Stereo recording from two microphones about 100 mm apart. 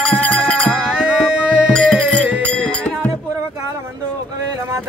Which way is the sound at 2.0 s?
15° right (ahead or behind).